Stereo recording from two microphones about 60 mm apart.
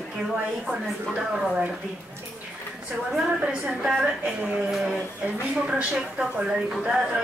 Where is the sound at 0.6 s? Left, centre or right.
Centre.